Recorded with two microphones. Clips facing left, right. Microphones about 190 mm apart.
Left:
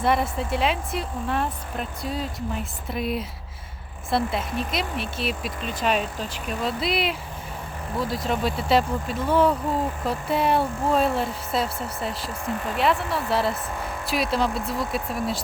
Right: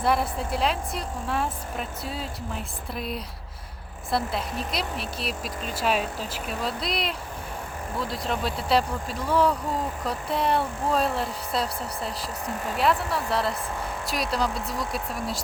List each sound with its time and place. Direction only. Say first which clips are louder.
0.0 s speech: left 2 dB; centre (ahead or behind)
9.1 s speech: left 3 dB; 25° left (ahead or behind)
10.0 s speech: left 3 dB; 5° left (ahead or behind)